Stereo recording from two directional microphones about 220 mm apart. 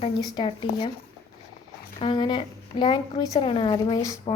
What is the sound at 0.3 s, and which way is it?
Speech, 25° left (ahead or behind).